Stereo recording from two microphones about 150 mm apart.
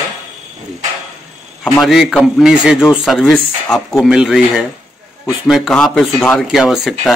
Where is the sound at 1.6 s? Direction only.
Centre (ahead or behind).